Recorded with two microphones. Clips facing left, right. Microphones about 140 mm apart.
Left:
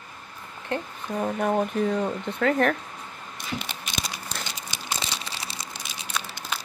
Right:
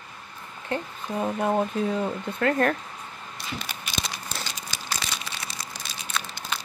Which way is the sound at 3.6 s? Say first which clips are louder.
Even; 15° left (ahead or behind).